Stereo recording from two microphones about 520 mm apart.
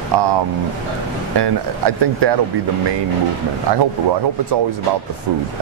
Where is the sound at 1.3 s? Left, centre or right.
Right.